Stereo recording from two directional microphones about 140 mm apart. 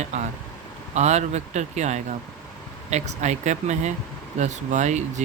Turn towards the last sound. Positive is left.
turn(degrees=-55)  # may be behind; listen again after turning